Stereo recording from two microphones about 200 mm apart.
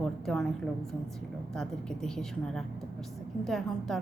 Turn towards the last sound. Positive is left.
turn(degrees=0)  # may be behind; listen again after turning